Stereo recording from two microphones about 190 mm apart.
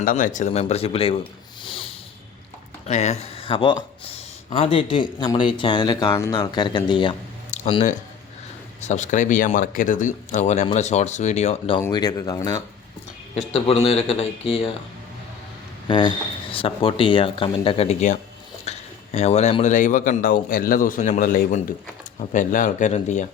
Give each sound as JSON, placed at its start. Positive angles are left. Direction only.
{"t": 0.0, "sound": "speech", "side_deg": 45}
{"t": 1.6, "sound": "a sound", "side_deg": 25}
{"t": 2.8, "sound": "speech", "side_deg": 35}
{"t": 11.8, "sound": "speech", "side_deg": 20}
{"t": 13.3, "sound": "speech", "side_deg": 35}
{"t": 15.9, "sound": "speech", "side_deg": 25}